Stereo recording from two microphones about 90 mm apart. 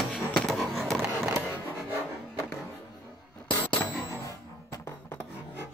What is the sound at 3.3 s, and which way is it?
Bicycle bell, 10° left (ahead or behind).